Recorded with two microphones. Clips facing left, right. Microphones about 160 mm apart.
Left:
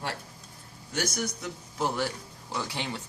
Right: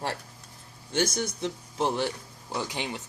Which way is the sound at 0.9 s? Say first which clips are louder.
Right 4 dB; 25° right (ahead or behind).